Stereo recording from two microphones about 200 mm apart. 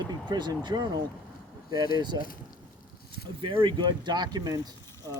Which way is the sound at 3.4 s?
25° right (ahead or behind).